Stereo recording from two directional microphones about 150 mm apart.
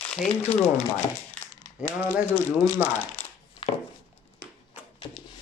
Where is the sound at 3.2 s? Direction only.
15° left (ahead or behind).